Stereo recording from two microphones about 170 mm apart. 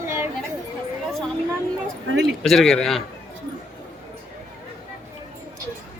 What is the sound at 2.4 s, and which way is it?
Speech, centre (ahead or behind).